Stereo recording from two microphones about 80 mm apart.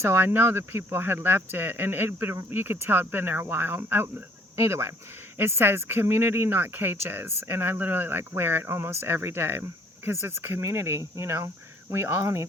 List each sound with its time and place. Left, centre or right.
0.0 s speech: right